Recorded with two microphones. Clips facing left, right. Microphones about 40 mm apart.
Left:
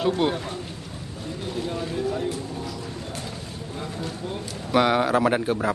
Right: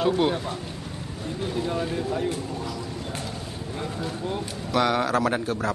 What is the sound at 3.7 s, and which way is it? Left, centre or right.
Speech, centre.